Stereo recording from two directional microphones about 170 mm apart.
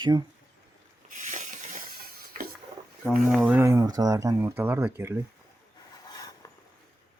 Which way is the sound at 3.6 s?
20° right (ahead or behind).